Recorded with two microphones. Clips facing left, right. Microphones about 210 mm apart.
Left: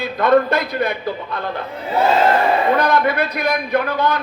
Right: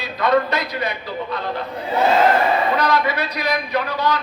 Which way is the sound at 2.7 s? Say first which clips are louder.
Left 3 dB; 55° left (ahead or behind).